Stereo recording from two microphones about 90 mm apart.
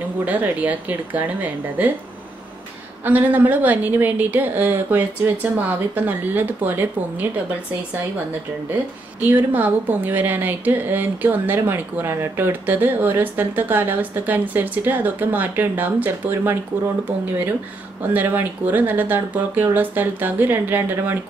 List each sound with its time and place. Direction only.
0.2 s a woman's voice: 15° right (ahead or behind)
3.1 s a woman's voice: 20° right (ahead or behind)
9.3 s a woman's voice: 20° right (ahead or behind)
18.1 s a woman's voice: 20° right (ahead or behind)